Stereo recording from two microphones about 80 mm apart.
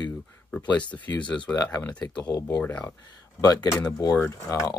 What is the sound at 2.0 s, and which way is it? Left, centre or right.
Speech, left.